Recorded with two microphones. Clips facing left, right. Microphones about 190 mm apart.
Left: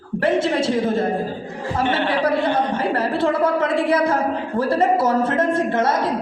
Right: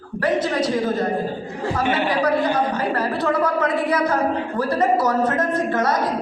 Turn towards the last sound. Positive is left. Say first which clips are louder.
# left 1 dB
turn(degrees=25)  # may be behind; listen again after turning